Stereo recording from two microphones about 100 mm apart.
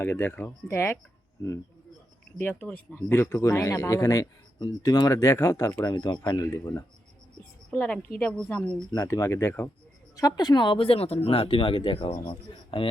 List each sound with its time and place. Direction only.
0.0 s speech: 20° left (ahead or behind)
2.4 s speech: 15° left (ahead or behind); by 6.4 s 45° left (ahead or behind)
6.4 s speech: 30° left (ahead or behind)
7.7 s a woman's voice: 15° left (ahead or behind)
9.0 s speech: 30° left (ahead or behind)
10.2 s speech: 40° left (ahead or behind); by 12.9 s 60° left (ahead or behind)